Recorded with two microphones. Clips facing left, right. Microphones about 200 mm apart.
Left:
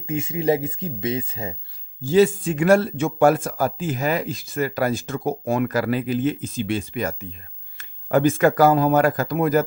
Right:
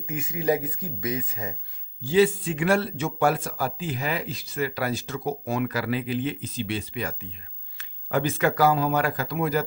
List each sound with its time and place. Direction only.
0.0 s speech: 25° left (ahead or behind)
2.0 s speech: 45° left (ahead or behind)